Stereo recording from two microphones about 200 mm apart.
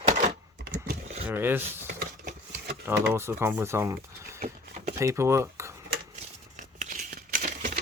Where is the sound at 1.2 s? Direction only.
10° right (ahead or behind).